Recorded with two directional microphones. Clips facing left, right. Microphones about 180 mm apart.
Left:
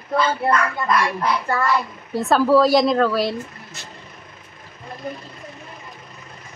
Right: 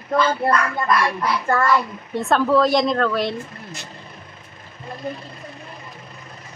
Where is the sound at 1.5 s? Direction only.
50° right (ahead or behind).